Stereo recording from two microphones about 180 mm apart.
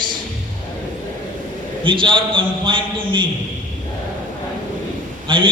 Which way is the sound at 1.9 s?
30° right (ahead or behind).